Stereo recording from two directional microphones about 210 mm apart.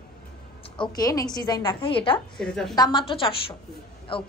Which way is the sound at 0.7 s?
15° left (ahead or behind).